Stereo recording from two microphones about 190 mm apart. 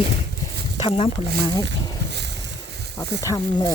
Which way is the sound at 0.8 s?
30° left (ahead or behind).